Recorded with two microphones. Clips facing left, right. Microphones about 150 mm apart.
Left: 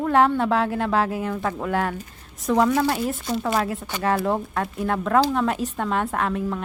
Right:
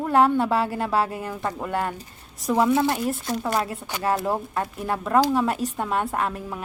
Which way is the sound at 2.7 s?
20° right (ahead or behind).